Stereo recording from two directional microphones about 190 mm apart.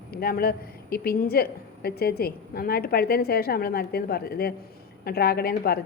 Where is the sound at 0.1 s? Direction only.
55° left (ahead or behind).